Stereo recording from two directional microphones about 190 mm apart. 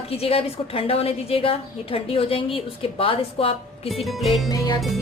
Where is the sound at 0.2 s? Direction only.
30° left (ahead or behind).